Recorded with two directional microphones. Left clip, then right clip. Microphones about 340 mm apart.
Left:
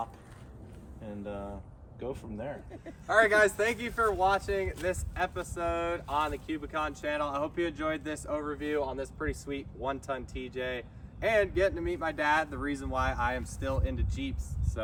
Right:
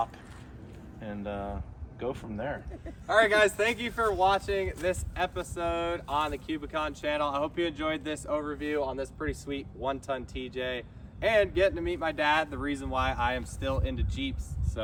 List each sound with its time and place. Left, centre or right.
1.0 s speech: centre
2.7 s speech: centre